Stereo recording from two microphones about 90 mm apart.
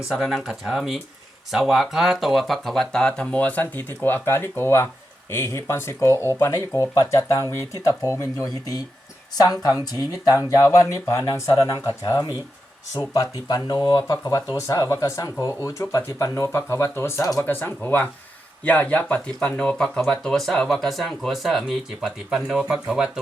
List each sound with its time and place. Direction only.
0.1 s speech: 5° right (ahead or behind); by 14.3 s 50° left (ahead or behind)
14.5 s speech: 35° left (ahead or behind); by 23.2 s 5° right (ahead or behind)